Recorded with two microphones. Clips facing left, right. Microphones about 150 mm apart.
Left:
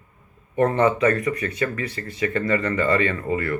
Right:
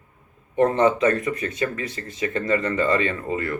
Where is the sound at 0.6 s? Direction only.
20° right (ahead or behind).